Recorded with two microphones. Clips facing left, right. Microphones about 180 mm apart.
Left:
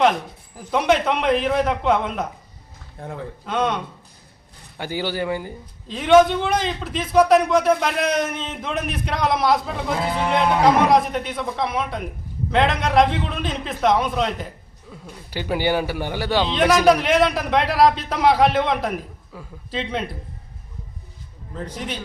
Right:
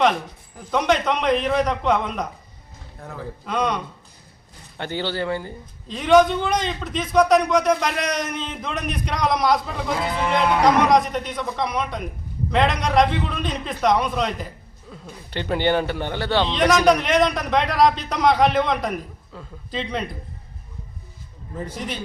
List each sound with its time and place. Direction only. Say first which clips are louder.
0.0 s a man's voice: left 1 dB; 5° left (ahead or behind)
3.0 s a man's voice: left 3 dB; 30° left (ahead or behind)
3.4 s a man's voice: left 1 dB; centre (ahead or behind)
5.9 s a man's voice: left 1 dB; centre (ahead or behind)
21.5 s a man's voice: even; 10° right (ahead or behind)